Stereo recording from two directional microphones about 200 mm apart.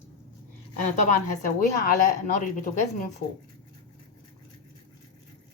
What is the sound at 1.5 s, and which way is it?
Speech, 40° left (ahead or behind).